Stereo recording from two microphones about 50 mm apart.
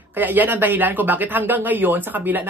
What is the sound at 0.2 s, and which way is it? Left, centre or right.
Speech, right.